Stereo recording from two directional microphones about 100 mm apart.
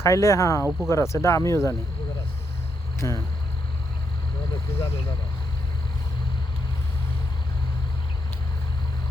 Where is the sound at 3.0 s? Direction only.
30° left (ahead or behind).